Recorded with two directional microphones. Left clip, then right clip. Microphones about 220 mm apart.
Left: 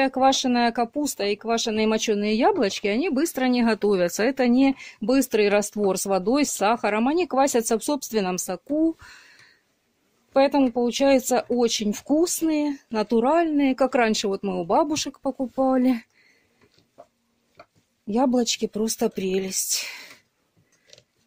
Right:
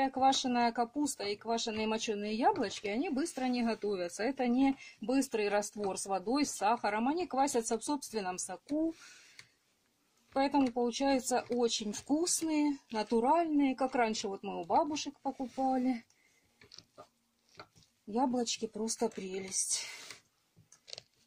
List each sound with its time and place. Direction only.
0.0 s speech: 40° left (ahead or behind)
10.3 s speech: 40° left (ahead or behind)
18.1 s speech: 40° left (ahead or behind)